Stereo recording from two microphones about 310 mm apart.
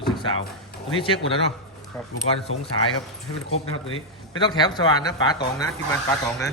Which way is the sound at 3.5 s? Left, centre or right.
Left.